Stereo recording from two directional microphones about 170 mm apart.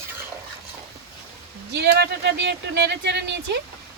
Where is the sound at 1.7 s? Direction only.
75° right (ahead or behind).